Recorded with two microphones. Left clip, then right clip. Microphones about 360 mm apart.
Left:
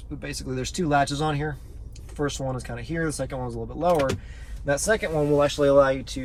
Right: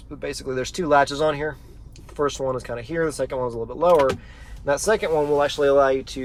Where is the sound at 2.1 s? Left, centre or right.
Centre.